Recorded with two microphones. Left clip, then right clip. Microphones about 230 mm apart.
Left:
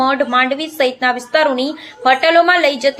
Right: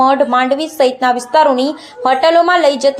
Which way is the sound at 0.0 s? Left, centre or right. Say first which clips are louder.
Right 3 dB; centre.